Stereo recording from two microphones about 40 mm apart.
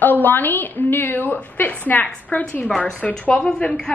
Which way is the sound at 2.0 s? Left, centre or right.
Left.